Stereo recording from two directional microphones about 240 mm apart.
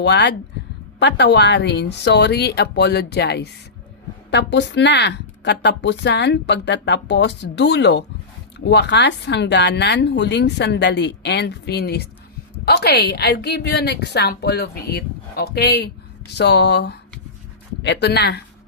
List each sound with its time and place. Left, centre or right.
0.0 s speech: left